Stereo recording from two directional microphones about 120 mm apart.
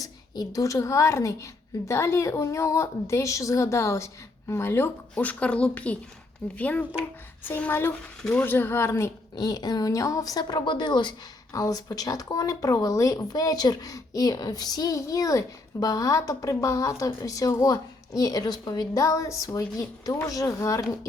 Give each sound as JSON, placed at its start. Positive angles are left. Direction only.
{"t": 0.0, "sound": "a woman's voice", "side_deg": 30}
{"t": 9.3, "sound": "a woman's voice", "side_deg": 35}
{"t": 11.5, "sound": "speech", "side_deg": 30}